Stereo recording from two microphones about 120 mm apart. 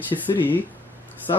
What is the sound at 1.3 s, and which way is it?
Speech, 35° left (ahead or behind).